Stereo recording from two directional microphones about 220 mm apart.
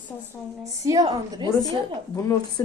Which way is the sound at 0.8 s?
15° right (ahead or behind).